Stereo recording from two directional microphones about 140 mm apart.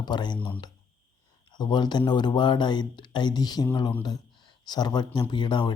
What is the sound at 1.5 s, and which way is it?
Speech, 30° left (ahead or behind).